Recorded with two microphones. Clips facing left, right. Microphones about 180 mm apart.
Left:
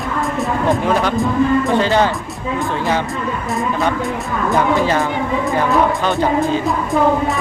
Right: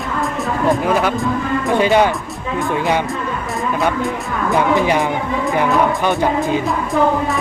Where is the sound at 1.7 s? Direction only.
15° right (ahead or behind).